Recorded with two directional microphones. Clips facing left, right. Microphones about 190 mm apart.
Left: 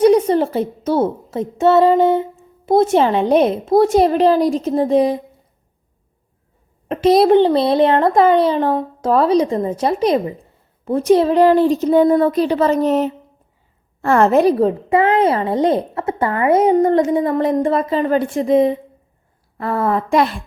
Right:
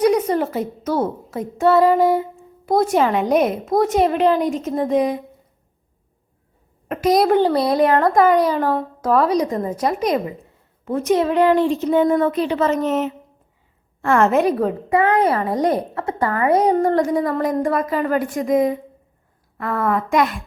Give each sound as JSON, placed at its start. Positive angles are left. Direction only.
{"t": 0.0, "sound": "a woman's voice", "side_deg": 30}
{"t": 6.8, "sound": "a woman's voice", "side_deg": 25}